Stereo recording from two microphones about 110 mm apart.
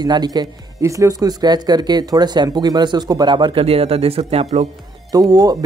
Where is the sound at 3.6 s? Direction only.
65° right (ahead or behind).